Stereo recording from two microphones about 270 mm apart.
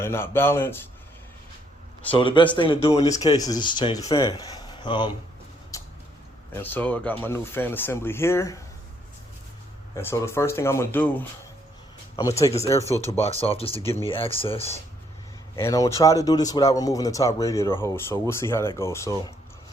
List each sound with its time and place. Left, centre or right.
0.0 s speech: centre
2.0 s speech: centre
5.7 s vehicle: centre
6.5 s speech: centre
9.9 s speech: centre
15.5 s speech: centre